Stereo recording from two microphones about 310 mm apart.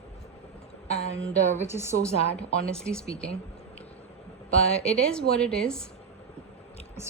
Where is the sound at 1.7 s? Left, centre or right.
Centre.